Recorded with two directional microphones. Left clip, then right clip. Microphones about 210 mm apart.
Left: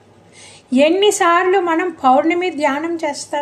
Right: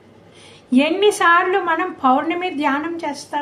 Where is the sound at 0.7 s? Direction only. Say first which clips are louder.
Left 3 dB; 50° left (ahead or behind).